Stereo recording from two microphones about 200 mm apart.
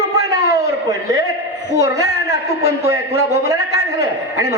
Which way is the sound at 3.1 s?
55° left (ahead or behind).